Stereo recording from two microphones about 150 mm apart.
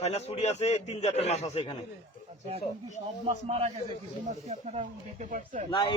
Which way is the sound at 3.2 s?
40° right (ahead or behind).